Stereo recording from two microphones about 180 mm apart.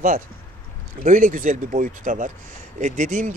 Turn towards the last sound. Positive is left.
turn(degrees=-45)  # may be behind; listen again after turning